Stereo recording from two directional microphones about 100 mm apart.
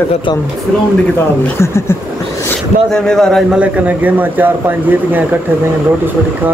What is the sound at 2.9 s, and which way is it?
Speech, 5° left (ahead or behind).